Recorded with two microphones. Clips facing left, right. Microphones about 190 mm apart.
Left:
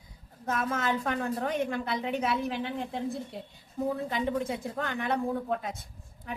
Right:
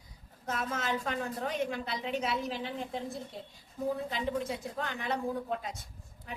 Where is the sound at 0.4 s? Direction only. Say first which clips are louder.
Left 4 dB; 55° left (ahead or behind).